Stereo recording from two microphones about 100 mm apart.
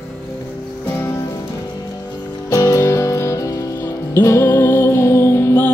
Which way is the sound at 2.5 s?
30° left (ahead or behind).